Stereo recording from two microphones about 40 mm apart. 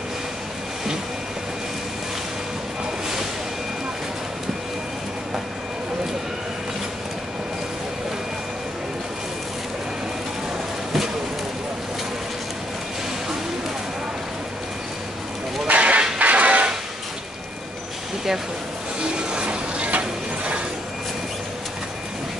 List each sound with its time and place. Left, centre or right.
15.6 s a sound: right
16.2 s music: right
18.9 s mechanisms: right